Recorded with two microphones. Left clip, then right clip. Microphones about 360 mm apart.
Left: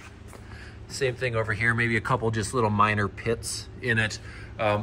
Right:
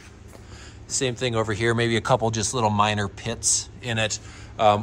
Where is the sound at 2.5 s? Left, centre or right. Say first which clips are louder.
Even; right.